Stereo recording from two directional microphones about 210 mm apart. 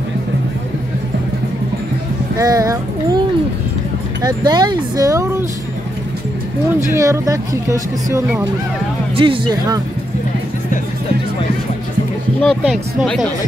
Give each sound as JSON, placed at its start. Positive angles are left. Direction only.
{"t": 2.3, "sound": "speech", "side_deg": -15}
{"t": 6.9, "sound": "speech", "side_deg": -15}
{"t": 12.4, "sound": "speech", "side_deg": 5}